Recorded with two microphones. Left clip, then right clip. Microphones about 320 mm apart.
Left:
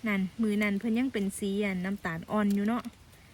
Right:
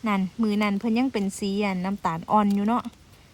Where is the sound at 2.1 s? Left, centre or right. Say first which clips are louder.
Right 11 dB; right.